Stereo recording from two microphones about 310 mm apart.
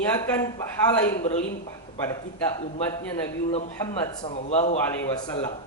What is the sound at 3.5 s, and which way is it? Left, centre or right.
A man's voice, centre.